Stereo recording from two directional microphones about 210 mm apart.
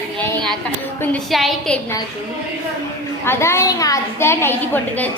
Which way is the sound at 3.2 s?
10° left (ahead or behind).